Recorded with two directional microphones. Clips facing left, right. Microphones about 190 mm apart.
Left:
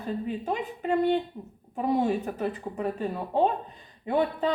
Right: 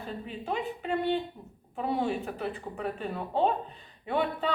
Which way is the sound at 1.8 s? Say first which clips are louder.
Left 4 dB; 40° left (ahead or behind).